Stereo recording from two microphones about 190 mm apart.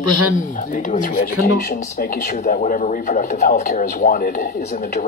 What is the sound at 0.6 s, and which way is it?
Speech, 45° left (ahead or behind).